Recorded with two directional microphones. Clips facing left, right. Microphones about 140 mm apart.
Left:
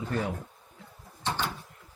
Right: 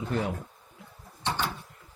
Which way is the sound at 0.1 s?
20° right (ahead or behind).